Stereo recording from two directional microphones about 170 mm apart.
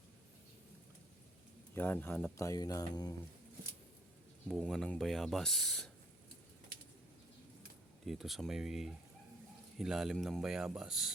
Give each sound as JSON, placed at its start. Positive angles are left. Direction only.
{"t": 1.7, "sound": "speech", "side_deg": 10}
{"t": 2.4, "sound": "speech", "side_deg": 20}
{"t": 4.6, "sound": "speech", "side_deg": 5}
{"t": 8.0, "sound": "speech", "side_deg": 0}